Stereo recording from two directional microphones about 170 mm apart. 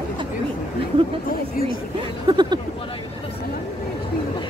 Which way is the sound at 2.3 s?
25° right (ahead or behind).